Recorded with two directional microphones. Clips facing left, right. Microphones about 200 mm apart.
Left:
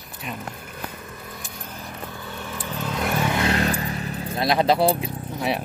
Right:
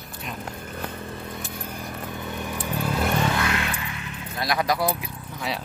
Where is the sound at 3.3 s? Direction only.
35° left (ahead or behind).